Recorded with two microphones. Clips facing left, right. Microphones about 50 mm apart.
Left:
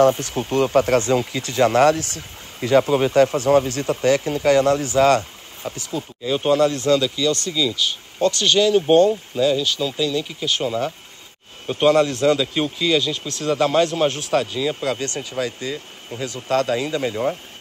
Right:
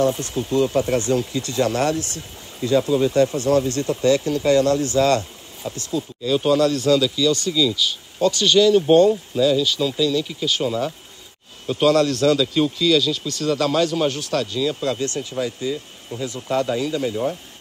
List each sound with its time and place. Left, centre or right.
0.3 s speech: left
4.9 s a sound: left
6.2 s a man's voice: left
14.9 s speech: left
15.7 s speech: left
16.4 s speech: left